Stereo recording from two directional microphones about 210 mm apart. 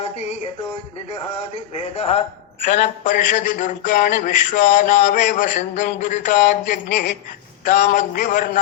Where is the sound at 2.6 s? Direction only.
35° left (ahead or behind).